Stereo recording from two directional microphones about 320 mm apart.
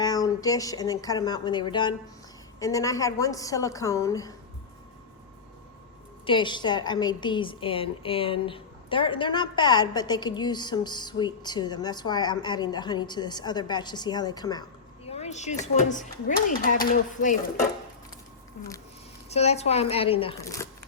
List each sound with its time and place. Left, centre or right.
0.0 s a woman's voice: centre
6.2 s a woman's voice: centre
19.3 s speech: centre